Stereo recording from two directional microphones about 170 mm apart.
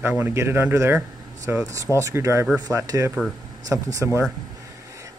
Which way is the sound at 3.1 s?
5° right (ahead or behind).